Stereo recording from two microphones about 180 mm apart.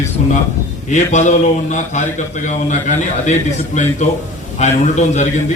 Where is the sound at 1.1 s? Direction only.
40° left (ahead or behind).